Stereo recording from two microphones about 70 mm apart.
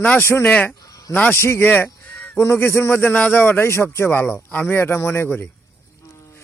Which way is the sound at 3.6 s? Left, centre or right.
Left.